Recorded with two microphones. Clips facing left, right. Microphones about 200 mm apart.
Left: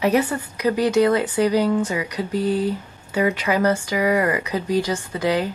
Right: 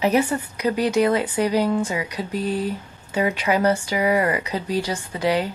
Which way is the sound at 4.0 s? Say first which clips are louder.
Left 2 dB; 30° right (ahead or behind).